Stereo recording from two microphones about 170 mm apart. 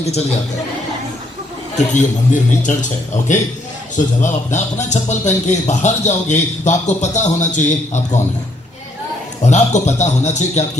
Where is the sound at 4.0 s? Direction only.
45° left (ahead or behind).